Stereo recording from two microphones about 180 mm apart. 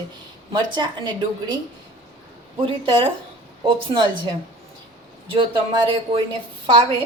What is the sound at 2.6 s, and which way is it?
A woman's voice, 30° right (ahead or behind).